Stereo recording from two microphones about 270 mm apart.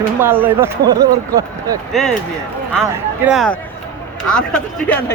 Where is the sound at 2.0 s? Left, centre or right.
Centre.